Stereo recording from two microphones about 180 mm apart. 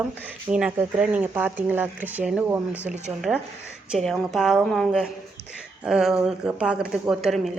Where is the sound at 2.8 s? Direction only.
40° right (ahead or behind).